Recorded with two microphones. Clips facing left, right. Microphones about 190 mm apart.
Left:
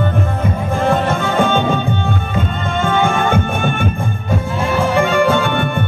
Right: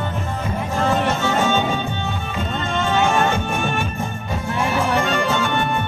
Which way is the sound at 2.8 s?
55° left (ahead or behind).